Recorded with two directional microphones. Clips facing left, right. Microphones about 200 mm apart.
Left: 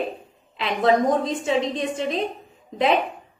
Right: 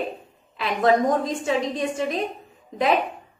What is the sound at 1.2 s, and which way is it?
A woman's voice, 25° left (ahead or behind).